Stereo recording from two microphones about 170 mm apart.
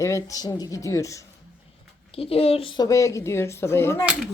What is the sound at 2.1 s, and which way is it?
Speech, 35° left (ahead or behind).